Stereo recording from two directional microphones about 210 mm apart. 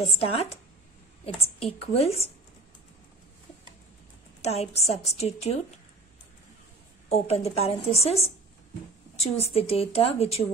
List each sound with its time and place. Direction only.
0.2 s a woman's voice: 30° left (ahead or behind)
4.4 s a woman's voice: 30° left (ahead or behind)
7.1 s a woman's voice: 30° left (ahead or behind)